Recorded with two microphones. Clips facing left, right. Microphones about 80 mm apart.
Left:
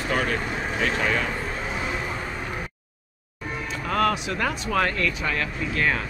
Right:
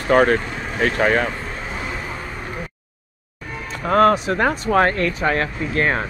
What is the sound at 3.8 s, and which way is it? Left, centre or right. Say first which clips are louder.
Speech: right 9 dB; right.